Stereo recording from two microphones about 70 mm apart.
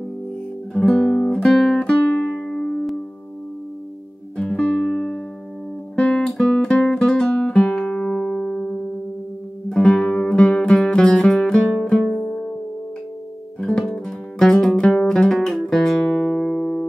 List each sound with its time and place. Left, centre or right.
0.7 s music: centre
2.3 s music: centre
4.4 s music: centre
5.9 s guitar: centre
6.3 s music: centre
12.3 s music: centre
13.6 s music: centre
16.3 s music: centre